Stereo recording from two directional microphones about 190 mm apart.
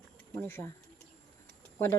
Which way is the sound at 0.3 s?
10° left (ahead or behind).